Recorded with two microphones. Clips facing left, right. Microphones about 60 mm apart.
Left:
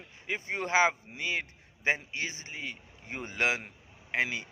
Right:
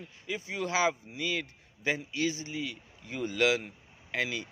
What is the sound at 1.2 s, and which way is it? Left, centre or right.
A man's voice, left.